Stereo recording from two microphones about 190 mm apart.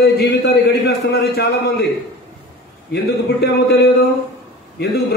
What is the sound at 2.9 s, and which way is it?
A man's voice, 60° left (ahead or behind).